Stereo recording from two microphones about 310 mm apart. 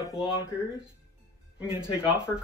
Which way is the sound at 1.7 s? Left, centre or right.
Centre.